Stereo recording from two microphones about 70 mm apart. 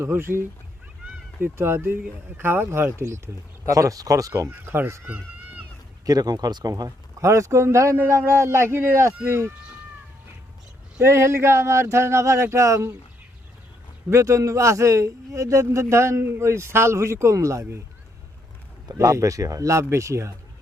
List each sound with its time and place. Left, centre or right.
0.0 s speech: right
3.7 s a man's voice: right
5.0 s a sound: right
6.1 s a man's voice: right
11.0 s speech: right
14.1 s a man's voice: right
18.9 s a man's voice: right